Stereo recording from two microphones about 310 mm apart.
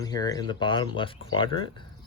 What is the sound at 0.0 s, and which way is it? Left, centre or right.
Speech, centre.